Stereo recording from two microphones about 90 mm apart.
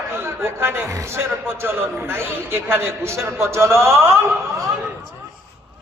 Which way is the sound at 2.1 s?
25° right (ahead or behind).